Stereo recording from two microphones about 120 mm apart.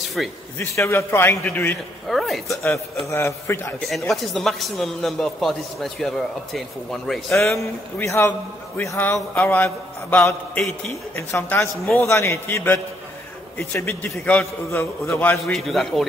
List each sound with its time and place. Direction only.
0.2 s a man's voice: centre (ahead or behind)
0.6 s a man's voice: 20° left (ahead or behind)
2.0 s speech: centre (ahead or behind)
2.6 s a man's voice: 20° left (ahead or behind)
4.1 s a man's voice: centre (ahead or behind)
8.0 s a man's voice: 20° left (ahead or behind)
15.3 s a man's voice: centre (ahead or behind)